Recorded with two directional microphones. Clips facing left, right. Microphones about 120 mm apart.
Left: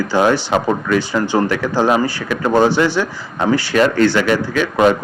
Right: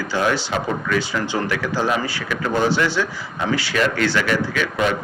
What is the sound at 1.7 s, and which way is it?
Speech, 55° left (ahead or behind).